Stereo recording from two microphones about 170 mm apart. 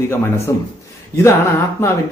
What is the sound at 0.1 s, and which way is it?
Speech, 15° left (ahead or behind).